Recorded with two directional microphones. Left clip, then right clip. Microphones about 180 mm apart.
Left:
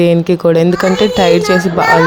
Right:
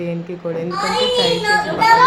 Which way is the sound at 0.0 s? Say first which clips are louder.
Left 15 dB; 45° left (ahead or behind).